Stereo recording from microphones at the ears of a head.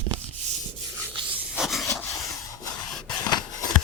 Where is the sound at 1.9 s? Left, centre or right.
Left.